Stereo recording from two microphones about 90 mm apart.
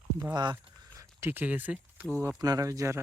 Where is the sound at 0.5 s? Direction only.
25° right (ahead or behind).